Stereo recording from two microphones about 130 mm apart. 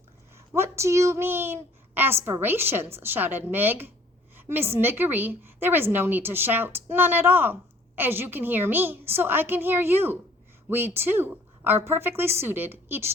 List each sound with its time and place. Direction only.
0.3 s a child's voice: 20° right (ahead or behind)